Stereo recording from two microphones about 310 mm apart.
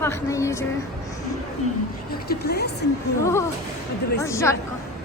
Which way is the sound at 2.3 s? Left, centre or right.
Left.